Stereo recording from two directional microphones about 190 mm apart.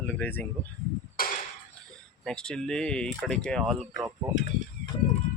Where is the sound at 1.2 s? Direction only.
50° left (ahead or behind).